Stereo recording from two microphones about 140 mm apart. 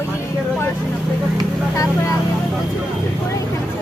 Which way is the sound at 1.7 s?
25° left (ahead or behind).